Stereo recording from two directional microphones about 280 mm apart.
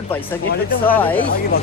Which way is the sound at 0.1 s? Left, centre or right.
Centre.